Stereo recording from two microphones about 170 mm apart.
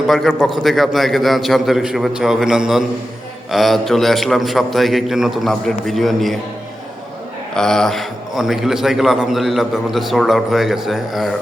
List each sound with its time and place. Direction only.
0.1 s a man's voice: centre (ahead or behind)
7.5 s a man's voice: 5° left (ahead or behind)